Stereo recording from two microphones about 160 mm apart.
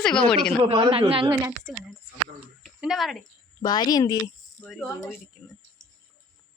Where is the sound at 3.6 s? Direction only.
25° left (ahead or behind).